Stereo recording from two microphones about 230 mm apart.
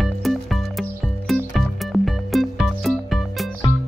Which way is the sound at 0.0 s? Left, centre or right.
Centre.